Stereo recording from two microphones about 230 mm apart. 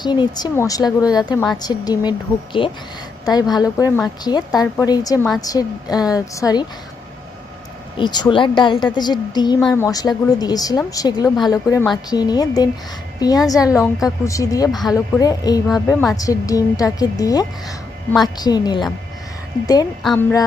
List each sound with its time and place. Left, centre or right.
0.0 s a woman's voice: centre
7.9 s a woman's voice: centre
9.6 s a woman's voice: centre
20.0 s speech: centre